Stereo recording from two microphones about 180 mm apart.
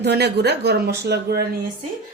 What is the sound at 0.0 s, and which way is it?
Speech, 65° right (ahead or behind).